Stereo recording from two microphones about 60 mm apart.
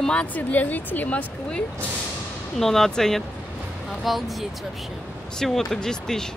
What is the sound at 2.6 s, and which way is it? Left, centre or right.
Speech, centre.